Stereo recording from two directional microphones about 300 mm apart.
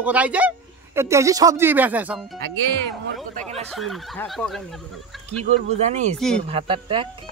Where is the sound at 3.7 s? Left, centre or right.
Centre.